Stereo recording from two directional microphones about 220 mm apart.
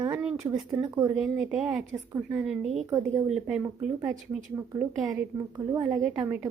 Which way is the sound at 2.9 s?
15° right (ahead or behind).